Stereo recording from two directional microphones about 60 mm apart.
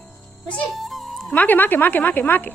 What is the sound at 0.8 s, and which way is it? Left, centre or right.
Music, centre.